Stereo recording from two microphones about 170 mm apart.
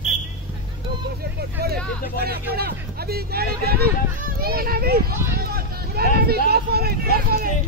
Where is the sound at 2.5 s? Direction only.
65° right (ahead or behind).